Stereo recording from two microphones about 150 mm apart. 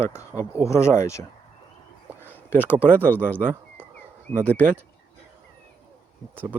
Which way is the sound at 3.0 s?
10° left (ahead or behind).